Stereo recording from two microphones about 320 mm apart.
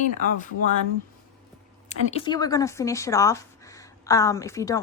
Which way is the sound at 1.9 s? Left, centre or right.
Centre.